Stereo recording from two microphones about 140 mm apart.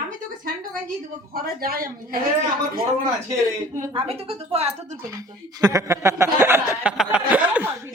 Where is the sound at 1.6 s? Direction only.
90° right.